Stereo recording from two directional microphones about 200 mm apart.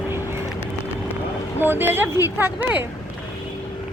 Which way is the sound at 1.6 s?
10° right (ahead or behind).